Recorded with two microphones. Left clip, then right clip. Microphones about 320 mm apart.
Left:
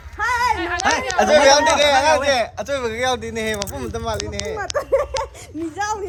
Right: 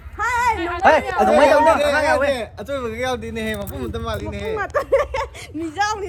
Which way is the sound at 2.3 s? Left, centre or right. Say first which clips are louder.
Left 4 dB; left.